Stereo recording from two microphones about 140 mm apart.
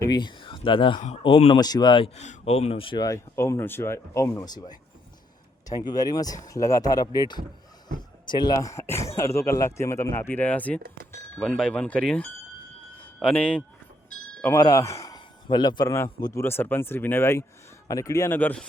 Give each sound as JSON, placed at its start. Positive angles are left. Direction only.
{"t": 0.0, "sound": "a man's voice", "side_deg": 35}
{"t": 1.5, "sound": "a man's voice", "side_deg": 30}
{"t": 2.1, "sound": "speech", "side_deg": 55}
{"t": 3.0, "sound": "speech", "side_deg": 20}
{"t": 13.0, "sound": "a sound", "side_deg": 10}
{"t": 14.4, "sound": "speech", "side_deg": 20}